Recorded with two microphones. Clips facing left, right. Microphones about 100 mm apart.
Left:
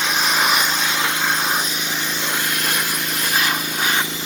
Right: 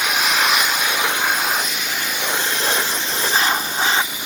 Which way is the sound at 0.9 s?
15° right (ahead or behind).